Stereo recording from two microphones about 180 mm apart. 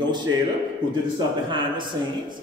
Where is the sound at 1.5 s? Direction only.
25° right (ahead or behind).